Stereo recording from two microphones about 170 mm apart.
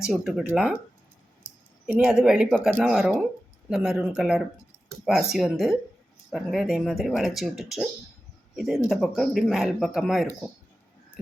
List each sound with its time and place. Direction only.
0.0 s speech: 5° right (ahead or behind)
1.9 s speech: 5° right (ahead or behind)